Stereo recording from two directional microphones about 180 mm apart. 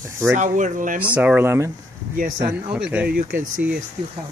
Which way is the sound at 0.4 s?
45° right (ahead or behind).